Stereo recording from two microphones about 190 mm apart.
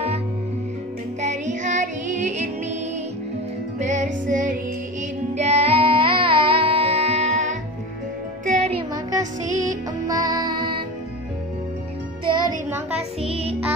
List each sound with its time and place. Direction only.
1.2 s music: 40° right (ahead or behind)
3.8 s music: 40° right (ahead or behind)
9.6 s music: 20° right (ahead or behind)
12.6 s child singing: 5° right (ahead or behind)
13.3 s music: 30° right (ahead or behind)